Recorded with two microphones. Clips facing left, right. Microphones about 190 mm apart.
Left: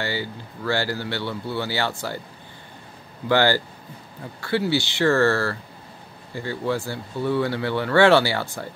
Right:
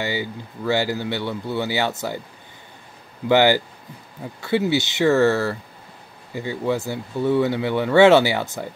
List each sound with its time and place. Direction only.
0.0 s speech: 20° right (ahead or behind)
3.3 s speech: 20° right (ahead or behind)